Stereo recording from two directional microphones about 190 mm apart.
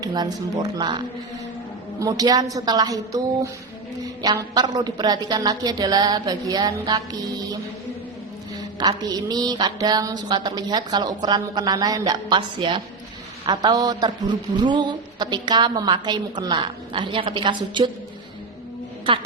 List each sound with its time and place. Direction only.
0.0 s a man's voice: 20° right (ahead or behind)
8.8 s a man's voice: 20° right (ahead or behind)